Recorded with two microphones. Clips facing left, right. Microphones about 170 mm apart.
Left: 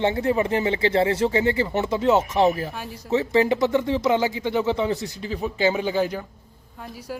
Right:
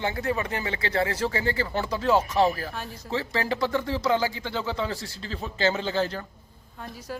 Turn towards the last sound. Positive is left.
turn(degrees=10)  # may be behind; listen again after turning